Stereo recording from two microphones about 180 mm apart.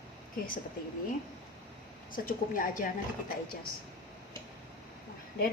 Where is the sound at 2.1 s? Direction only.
50° left (ahead or behind).